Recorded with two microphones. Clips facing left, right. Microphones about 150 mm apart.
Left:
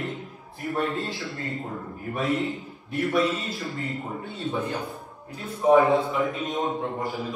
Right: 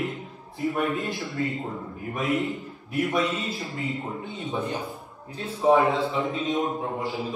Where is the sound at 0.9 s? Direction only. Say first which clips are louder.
Right 3 dB; 20° right (ahead or behind).